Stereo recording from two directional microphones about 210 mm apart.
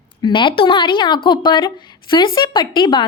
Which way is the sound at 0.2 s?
20° left (ahead or behind).